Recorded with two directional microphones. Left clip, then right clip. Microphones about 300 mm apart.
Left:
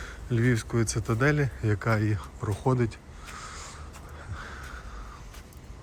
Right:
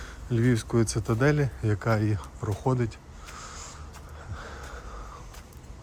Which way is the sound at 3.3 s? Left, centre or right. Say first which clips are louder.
Left 1 dB; centre.